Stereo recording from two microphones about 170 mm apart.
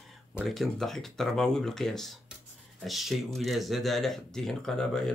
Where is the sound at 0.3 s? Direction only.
Centre (ahead or behind).